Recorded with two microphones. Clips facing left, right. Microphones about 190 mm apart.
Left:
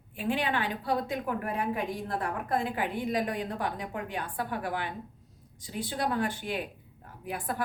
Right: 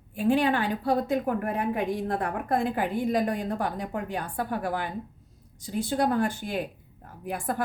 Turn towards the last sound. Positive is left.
turn(degrees=-45)  # may be behind; listen again after turning